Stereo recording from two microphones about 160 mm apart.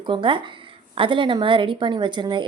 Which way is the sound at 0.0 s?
30° right (ahead or behind).